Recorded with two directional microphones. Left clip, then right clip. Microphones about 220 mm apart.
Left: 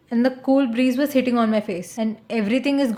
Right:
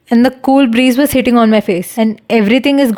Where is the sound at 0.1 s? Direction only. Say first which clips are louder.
Right 9 dB; 45° right (ahead or behind).